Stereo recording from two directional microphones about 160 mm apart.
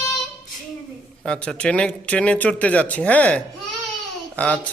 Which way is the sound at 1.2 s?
5° left (ahead or behind).